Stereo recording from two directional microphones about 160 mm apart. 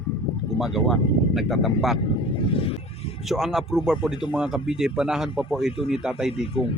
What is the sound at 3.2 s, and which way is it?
Speech, centre (ahead or behind).